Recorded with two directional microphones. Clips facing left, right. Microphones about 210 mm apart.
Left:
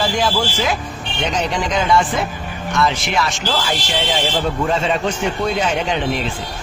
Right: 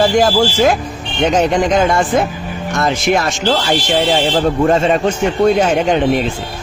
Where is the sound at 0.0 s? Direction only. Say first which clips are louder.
Right 7 dB; 50° right (ahead or behind).